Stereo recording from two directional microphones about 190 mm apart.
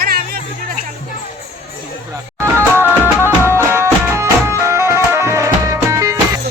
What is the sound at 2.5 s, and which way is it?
Music, 10° right (ahead or behind).